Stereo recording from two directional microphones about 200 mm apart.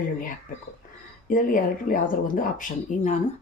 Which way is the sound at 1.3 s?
40° left (ahead or behind).